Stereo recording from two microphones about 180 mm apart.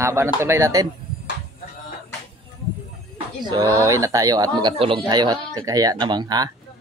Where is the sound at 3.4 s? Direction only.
20° right (ahead or behind).